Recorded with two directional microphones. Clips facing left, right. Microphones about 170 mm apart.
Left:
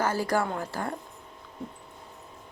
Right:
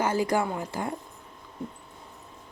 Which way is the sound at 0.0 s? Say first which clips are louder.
Right 1 dB; 20° right (ahead or behind).